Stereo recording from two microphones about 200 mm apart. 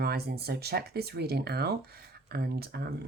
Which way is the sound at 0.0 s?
55° right (ahead or behind).